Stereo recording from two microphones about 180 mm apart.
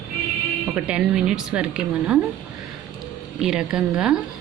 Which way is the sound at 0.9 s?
5° right (ahead or behind).